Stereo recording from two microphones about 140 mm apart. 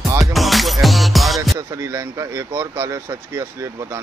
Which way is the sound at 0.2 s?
Centre (ahead or behind).